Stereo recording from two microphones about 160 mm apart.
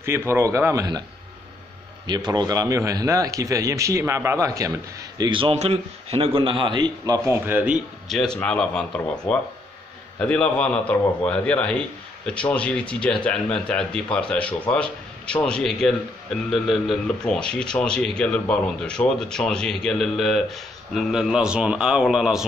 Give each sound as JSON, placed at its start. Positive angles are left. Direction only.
{"t": 0.3, "sound": "a man's voice", "side_deg": -15}
{"t": 2.0, "sound": "a man's voice", "side_deg": -25}
{"t": 7.2, "sound": "speech", "side_deg": -10}